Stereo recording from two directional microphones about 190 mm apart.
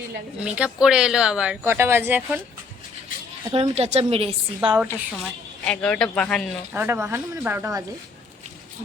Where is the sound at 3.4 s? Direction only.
30° right (ahead or behind).